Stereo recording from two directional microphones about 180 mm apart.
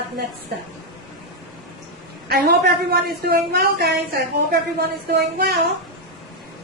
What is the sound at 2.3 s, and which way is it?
A man's voice, 60° right (ahead or behind).